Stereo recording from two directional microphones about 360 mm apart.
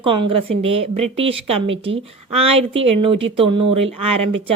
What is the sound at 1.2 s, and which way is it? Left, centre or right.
A woman's voice, centre.